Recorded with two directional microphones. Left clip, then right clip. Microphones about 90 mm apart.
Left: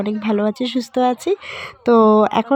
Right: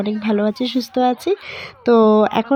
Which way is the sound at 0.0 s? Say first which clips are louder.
Even; 35° right (ahead or behind).